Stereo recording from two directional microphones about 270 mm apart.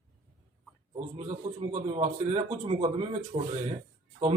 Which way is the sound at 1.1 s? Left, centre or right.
Right.